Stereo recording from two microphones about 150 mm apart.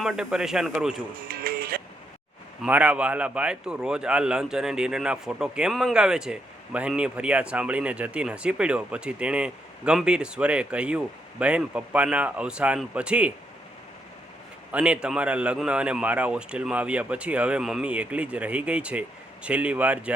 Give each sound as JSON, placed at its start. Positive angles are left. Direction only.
{"t": 0.0, "sound": "speech", "side_deg": 0}
{"t": 1.3, "sound": "music", "side_deg": -80}
{"t": 2.6, "sound": "a man's voice", "side_deg": -10}
{"t": 14.7, "sound": "a man's voice", "side_deg": -10}